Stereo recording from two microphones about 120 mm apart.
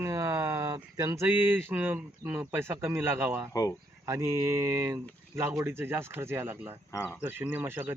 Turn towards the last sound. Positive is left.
turn(degrees=-20)  # may be behind; listen again after turning